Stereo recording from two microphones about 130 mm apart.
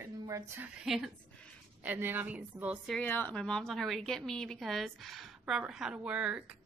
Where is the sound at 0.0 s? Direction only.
20° right (ahead or behind).